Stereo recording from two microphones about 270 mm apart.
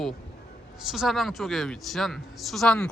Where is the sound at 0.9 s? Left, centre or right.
Centre.